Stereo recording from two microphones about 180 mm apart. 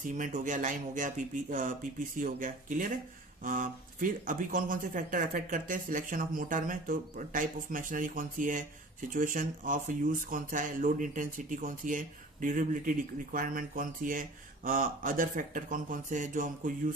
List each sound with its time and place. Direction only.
0.1 s speech: 45° right (ahead or behind)